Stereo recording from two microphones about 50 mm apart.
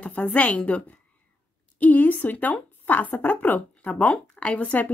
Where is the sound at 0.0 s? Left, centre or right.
Left.